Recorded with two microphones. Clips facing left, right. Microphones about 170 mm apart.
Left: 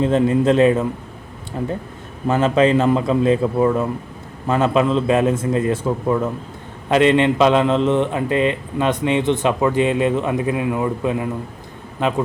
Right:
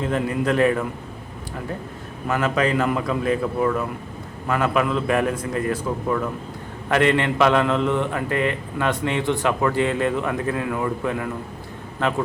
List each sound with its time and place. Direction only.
0.0 s a man's voice: 25° left (ahead or behind)
2.2 s a man's voice: 25° left (ahead or behind)